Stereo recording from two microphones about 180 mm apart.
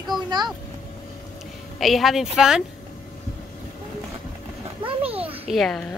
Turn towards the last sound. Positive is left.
turn(degrees=5)  # may be behind; listen again after turning